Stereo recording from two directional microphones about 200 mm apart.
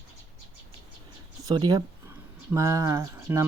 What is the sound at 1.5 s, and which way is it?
Speech, 20° right (ahead or behind).